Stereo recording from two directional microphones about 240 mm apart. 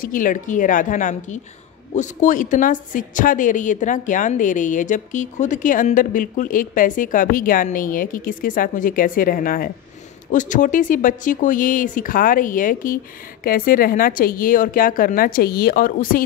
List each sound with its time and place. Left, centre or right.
0.0 s a woman's voice: left